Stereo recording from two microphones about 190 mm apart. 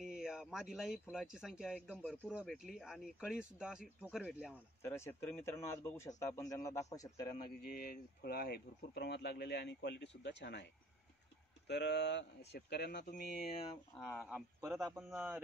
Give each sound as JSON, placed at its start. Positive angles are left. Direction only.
{"t": 0.0, "sound": "speech", "side_deg": -5}
{"t": 2.0, "sound": "a man's voice", "side_deg": 5}
{"t": 4.8, "sound": "a man's voice", "side_deg": 15}
{"t": 7.6, "sound": "speech", "side_deg": 50}
{"t": 13.9, "sound": "a man's voice", "side_deg": 10}
{"t": 14.3, "sound": "a man's voice", "side_deg": -15}
{"t": 14.9, "sound": "speech", "side_deg": 0}